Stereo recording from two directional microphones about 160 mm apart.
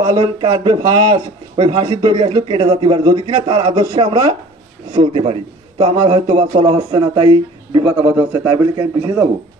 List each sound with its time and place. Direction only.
0.1 s speech: 35° right (ahead or behind)
0.5 s a man's voice: 25° right (ahead or behind)